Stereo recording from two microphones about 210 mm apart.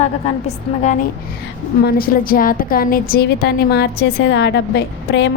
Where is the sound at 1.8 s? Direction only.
45° left (ahead or behind).